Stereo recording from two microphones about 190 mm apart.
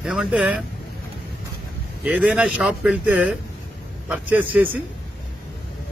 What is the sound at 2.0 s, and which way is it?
A man's voice, 5° right (ahead or behind).